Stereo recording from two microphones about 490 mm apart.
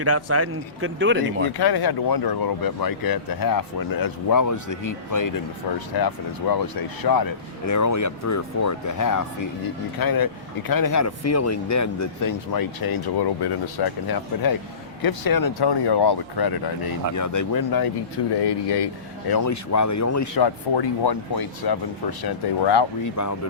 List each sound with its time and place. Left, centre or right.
0.0 s speech: right
1.5 s speech: left
17.2 s speech: left
19.3 s speech: left
20.4 s speech: left
23.0 s speech: left